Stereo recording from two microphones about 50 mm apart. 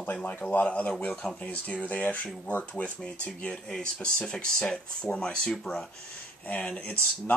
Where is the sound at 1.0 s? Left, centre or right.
Centre.